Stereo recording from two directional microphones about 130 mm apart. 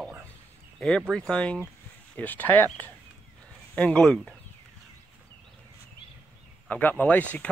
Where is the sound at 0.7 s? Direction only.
5° left (ahead or behind).